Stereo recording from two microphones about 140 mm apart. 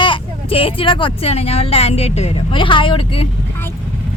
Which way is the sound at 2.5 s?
35° left (ahead or behind).